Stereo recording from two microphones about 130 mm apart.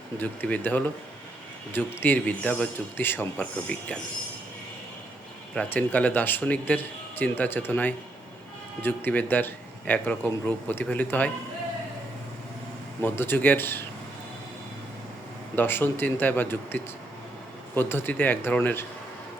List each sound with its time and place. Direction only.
0.2 s speech: 10° left (ahead or behind)
5.7 s speech: 10° left (ahead or behind)
13.0 s speech: 15° left (ahead or behind)
15.5 s speech: 15° left (ahead or behind)